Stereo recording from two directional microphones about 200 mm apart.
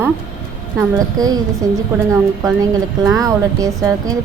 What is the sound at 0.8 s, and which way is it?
Speech, 20° right (ahead or behind).